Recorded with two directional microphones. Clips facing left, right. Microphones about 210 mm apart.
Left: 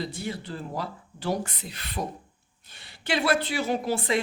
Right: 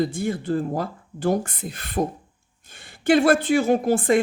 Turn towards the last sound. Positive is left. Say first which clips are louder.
# right 7 dB
turn(degrees=-50)  # may be behind; listen again after turning